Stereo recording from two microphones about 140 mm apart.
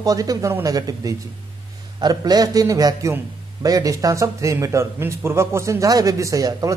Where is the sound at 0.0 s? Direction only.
25° right (ahead or behind).